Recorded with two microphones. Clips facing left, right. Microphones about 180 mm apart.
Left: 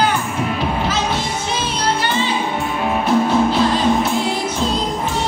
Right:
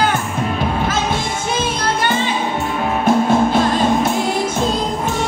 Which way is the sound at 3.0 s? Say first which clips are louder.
Right 2 dB; 50° right (ahead or behind).